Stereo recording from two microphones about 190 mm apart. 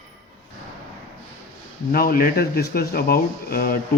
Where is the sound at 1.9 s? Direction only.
50° left (ahead or behind).